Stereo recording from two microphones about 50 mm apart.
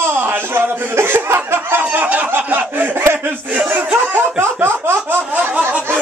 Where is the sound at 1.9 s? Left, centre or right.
Right.